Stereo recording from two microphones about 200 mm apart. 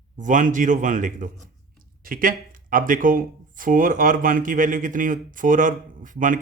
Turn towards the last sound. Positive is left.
turn(degrees=-40)  # may be behind; listen again after turning